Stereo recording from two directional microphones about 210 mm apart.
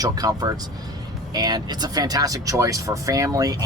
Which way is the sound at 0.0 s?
20° right (ahead or behind).